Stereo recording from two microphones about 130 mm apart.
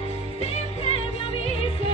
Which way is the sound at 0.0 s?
50° left (ahead or behind).